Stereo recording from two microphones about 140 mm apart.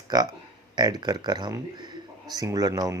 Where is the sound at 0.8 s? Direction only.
30° right (ahead or behind).